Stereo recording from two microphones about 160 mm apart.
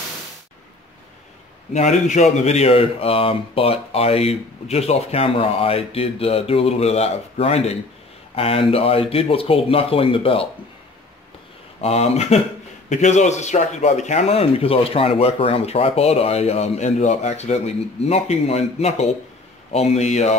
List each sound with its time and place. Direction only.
1.7 s a man's voice: 45° left (ahead or behind)
11.8 s speech: 40° left (ahead or behind)